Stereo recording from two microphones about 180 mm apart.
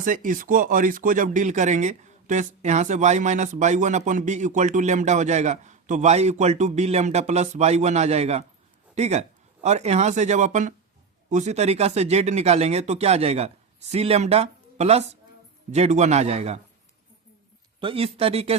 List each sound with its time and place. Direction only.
0.0 s speech: 50° right (ahead or behind)
17.7 s speech: 30° right (ahead or behind)